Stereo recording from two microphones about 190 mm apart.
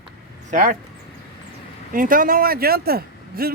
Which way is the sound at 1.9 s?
45° right (ahead or behind).